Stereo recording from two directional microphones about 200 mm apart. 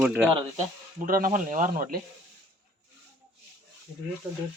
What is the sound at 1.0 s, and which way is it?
Speech, 45° right (ahead or behind).